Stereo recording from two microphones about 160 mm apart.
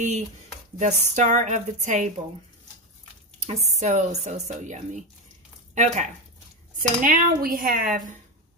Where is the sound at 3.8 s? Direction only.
45° right (ahead or behind).